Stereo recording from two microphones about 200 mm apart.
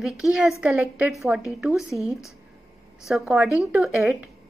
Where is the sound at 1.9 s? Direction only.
15° left (ahead or behind).